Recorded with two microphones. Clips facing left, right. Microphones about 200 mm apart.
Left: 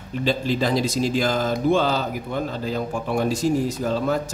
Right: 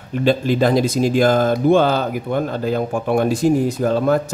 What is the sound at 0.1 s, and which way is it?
Speech, 55° right (ahead or behind).